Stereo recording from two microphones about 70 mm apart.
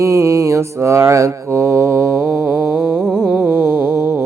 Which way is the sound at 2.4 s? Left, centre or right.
Right.